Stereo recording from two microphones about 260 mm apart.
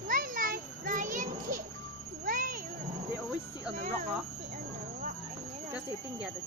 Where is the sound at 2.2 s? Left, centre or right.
Right.